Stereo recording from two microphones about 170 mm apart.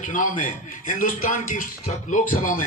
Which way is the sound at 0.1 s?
50° left (ahead or behind).